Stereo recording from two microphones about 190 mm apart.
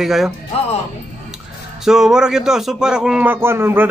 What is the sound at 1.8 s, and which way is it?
A man's voice, 5° right (ahead or behind).